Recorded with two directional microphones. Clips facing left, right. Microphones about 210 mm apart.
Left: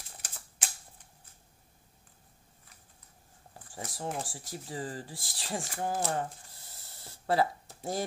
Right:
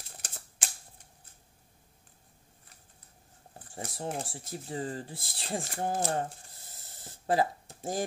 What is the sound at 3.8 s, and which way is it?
Speech, 30° right (ahead or behind).